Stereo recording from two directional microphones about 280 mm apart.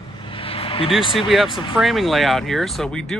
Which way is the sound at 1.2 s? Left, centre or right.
Centre.